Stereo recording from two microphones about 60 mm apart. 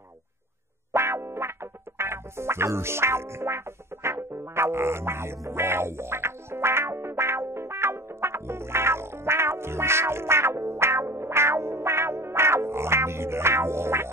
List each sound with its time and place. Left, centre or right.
0.9 s music: right